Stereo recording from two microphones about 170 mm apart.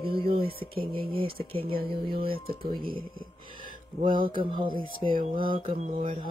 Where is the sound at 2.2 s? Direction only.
60° right (ahead or behind).